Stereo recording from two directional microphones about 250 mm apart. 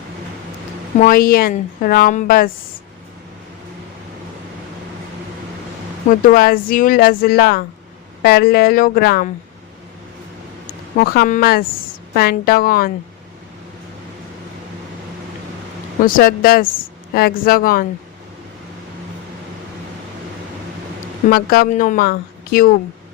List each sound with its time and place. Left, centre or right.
0.9 s speech: left
6.1 s speech: left
10.9 s speech: left
16.0 s speech: left
21.2 s speech: left